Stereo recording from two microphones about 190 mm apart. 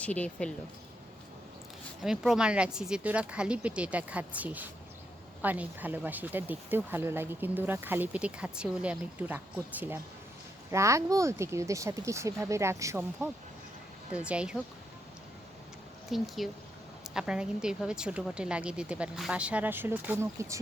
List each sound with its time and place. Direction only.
0.0 s speech: 5° left (ahead or behind)
2.0 s speech: 5° right (ahead or behind)
16.0 s speech: centre (ahead or behind)